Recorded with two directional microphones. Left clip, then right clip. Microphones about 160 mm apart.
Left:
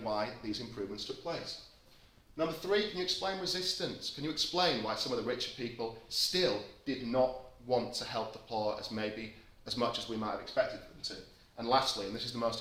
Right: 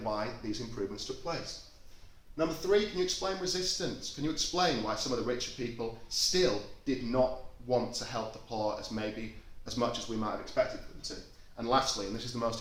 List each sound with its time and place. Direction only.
0.0 s speech: 15° left (ahead or behind)
2.3 s speech: 25° left (ahead or behind)
11.5 s speech: 30° left (ahead or behind)